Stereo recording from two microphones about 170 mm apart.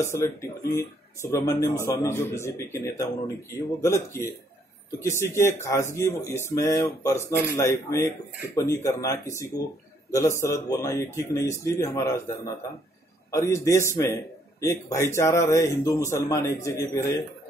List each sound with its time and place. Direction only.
0.0 s speech: 15° left (ahead or behind)
3.8 s speech: 15° left (ahead or behind)
13.3 s speech: 15° left (ahead or behind)